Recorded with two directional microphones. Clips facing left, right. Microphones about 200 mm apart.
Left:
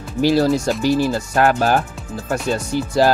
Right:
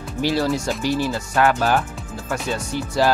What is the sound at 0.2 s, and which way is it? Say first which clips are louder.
Speech: left 5 dB; 40° left (ahead or behind).